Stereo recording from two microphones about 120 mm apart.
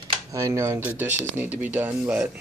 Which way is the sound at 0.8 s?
15° right (ahead or behind).